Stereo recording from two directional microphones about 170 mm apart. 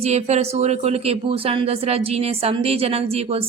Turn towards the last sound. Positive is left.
turn(degrees=-35)  # may be behind; listen again after turning